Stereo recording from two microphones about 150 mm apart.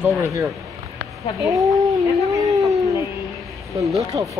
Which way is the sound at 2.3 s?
25° right (ahead or behind).